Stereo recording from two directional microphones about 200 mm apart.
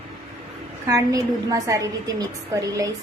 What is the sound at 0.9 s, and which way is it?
A woman's voice, 15° right (ahead or behind).